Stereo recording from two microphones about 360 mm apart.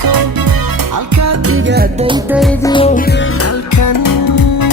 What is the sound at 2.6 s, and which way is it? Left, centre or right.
Music, centre.